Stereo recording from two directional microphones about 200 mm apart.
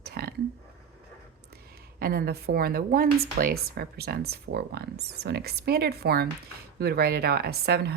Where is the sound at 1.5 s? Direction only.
50° right (ahead or behind).